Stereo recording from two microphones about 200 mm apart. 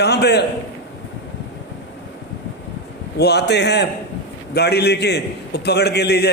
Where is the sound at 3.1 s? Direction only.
55° left (ahead or behind).